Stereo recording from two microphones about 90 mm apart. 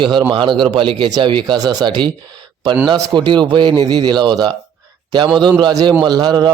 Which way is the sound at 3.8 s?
50° right (ahead or behind).